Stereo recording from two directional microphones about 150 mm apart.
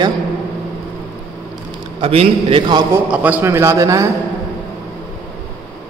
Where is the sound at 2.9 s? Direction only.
10° right (ahead or behind).